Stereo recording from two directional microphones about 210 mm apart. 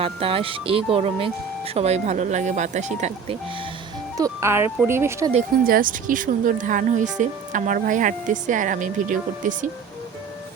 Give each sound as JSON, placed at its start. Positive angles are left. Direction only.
{"t": 0.0, "sound": "speech", "side_deg": -25}
{"t": 4.2, "sound": "speech", "side_deg": -15}
{"t": 5.6, "sound": "speech", "side_deg": -40}